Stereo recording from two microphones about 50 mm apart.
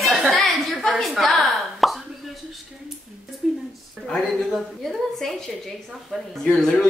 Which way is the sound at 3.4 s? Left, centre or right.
Centre.